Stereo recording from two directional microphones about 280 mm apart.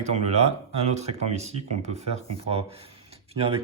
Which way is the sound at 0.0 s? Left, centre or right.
Right.